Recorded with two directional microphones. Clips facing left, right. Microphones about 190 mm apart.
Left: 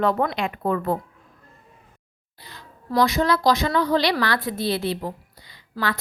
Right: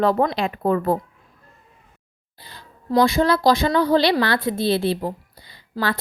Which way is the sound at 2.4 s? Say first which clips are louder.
Even; 30° right (ahead or behind).